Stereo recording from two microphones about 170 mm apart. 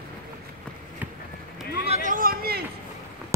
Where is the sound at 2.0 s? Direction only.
55° right (ahead or behind).